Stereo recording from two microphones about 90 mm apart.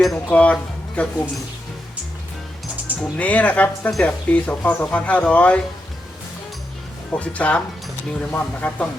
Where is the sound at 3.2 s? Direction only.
15° left (ahead or behind).